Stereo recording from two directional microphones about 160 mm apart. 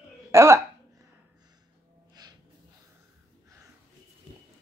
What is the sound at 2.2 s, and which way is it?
Snort, 25° right (ahead or behind).